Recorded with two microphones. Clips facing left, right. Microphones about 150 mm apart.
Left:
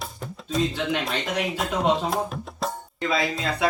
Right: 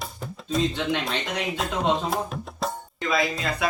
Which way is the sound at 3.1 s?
25° left (ahead or behind).